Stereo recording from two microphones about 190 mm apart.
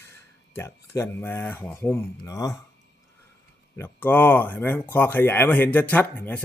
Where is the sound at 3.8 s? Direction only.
10° left (ahead or behind).